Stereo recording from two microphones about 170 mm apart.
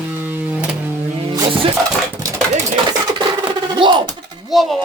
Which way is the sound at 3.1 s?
25° right (ahead or behind).